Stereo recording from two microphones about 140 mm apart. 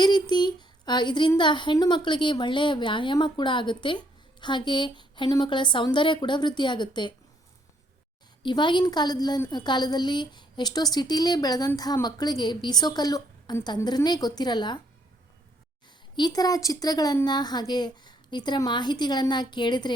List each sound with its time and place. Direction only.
0.0 s a woman's voice: 30° left (ahead or behind)
8.4 s a woman's voice: 35° left (ahead or behind)
16.1 s a woman's voice: 30° left (ahead or behind)